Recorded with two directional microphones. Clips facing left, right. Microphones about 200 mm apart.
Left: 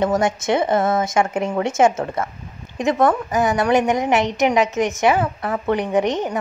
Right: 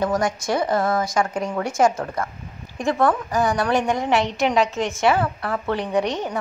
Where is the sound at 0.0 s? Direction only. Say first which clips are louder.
Left 3 dB; 25° left (ahead or behind).